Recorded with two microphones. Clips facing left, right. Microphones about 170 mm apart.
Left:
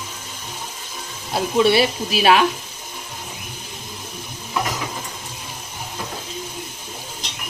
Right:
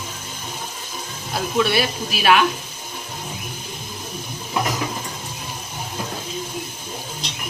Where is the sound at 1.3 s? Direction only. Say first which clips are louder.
Left 4 dB; 30° left (ahead or behind).